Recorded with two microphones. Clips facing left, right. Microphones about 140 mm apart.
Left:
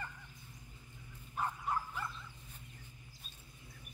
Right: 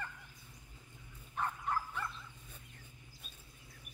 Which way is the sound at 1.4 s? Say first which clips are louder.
Even; 5° left (ahead or behind).